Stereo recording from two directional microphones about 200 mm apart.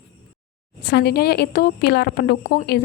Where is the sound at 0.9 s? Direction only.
55° left (ahead or behind).